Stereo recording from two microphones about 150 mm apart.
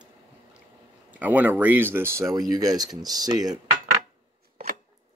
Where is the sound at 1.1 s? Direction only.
10° right (ahead or behind).